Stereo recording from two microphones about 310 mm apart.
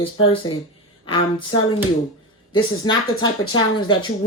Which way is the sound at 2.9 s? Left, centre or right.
Centre.